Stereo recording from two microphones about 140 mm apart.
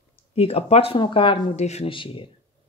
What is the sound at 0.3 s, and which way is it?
Speech, 45° left (ahead or behind).